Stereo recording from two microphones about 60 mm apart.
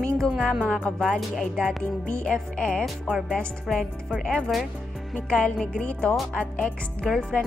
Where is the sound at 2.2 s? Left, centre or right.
Centre.